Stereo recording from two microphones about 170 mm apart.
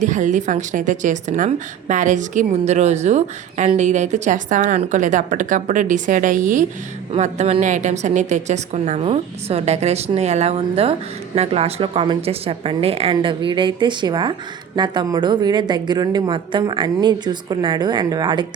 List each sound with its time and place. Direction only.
0.0 s a woman's voice: 45° right (ahead or behind); by 18.4 s 25° right (ahead or behind)